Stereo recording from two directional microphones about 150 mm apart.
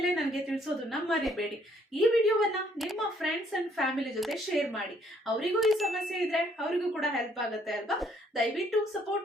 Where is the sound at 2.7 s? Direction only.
Centre (ahead or behind).